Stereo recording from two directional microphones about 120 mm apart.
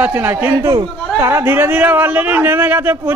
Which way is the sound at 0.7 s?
25° right (ahead or behind).